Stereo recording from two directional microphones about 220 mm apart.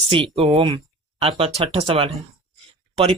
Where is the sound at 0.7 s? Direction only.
25° right (ahead or behind).